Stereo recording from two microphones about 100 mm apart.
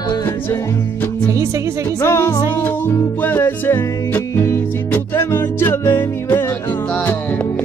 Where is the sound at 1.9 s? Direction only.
30° left (ahead or behind).